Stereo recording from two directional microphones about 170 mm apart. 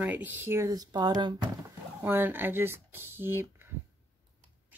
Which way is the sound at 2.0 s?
10° right (ahead or behind).